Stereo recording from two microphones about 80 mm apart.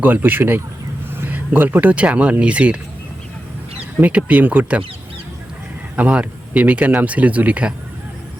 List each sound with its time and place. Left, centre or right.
0.0 s speech: right
4.0 s speech: centre
6.0 s speech: centre